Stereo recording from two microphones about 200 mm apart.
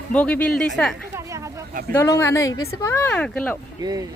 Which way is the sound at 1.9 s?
15° left (ahead or behind).